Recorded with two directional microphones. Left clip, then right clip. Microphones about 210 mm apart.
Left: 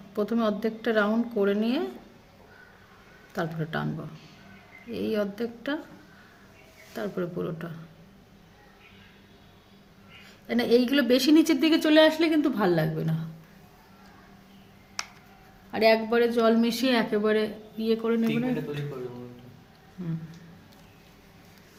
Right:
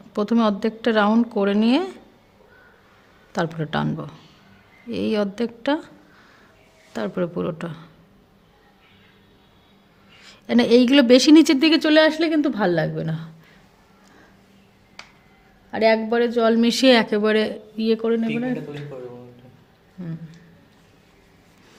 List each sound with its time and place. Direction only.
0.1 s a woman's voice: 50° right (ahead or behind)
3.3 s a woman's voice: 50° right (ahead or behind)
6.9 s a woman's voice: 50° right (ahead or behind)
10.2 s speech: 55° right (ahead or behind); by 13.2 s 40° right (ahead or behind)
15.7 s speech: 35° right (ahead or behind)